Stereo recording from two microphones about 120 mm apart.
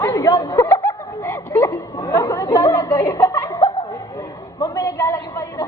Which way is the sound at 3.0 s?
25° left (ahead or behind).